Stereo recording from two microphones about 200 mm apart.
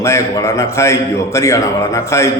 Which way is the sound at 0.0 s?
15° left (ahead or behind).